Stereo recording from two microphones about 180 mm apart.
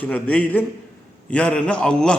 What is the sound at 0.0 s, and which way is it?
A man's voice, 5° left (ahead or behind).